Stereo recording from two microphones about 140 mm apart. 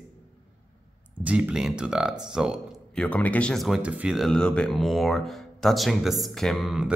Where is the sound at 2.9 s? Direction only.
10° left (ahead or behind).